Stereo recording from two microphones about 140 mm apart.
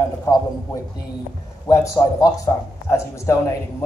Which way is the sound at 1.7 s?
25° left (ahead or behind).